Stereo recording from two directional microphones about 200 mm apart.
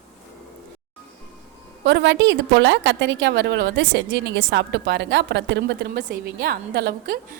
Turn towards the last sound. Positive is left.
turn(degrees=-50)  # may be behind; listen again after turning